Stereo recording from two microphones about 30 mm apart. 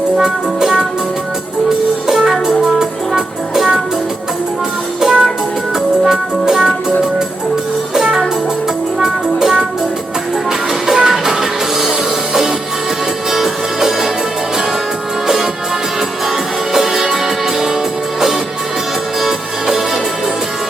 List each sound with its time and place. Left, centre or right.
0.2 s music: centre
2.0 s music: centre
4.9 s music: centre
9.0 s music: centre
10.8 s music: centre
16.7 s music: centre